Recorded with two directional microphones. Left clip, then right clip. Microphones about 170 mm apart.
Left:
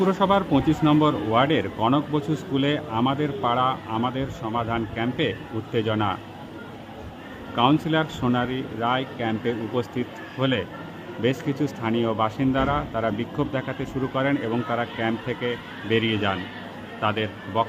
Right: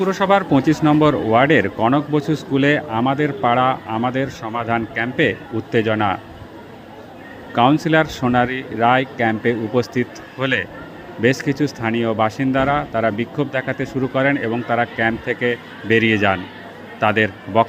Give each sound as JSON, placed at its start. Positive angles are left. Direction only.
{"t": 0.0, "sound": "speech", "side_deg": -15}
{"t": 7.5, "sound": "speech", "side_deg": -20}